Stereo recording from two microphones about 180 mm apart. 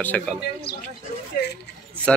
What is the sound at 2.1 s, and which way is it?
Speech, 5° left (ahead or behind).